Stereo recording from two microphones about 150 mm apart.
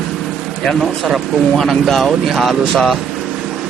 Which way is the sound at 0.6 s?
Centre (ahead or behind).